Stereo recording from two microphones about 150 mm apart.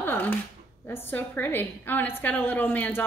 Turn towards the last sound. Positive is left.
turn(degrees=10)  # may be behind; listen again after turning